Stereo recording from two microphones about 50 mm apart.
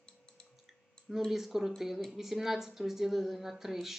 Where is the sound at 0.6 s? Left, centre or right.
Centre.